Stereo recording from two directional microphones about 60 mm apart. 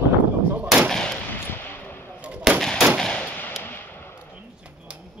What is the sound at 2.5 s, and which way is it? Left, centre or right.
Gunshot, centre.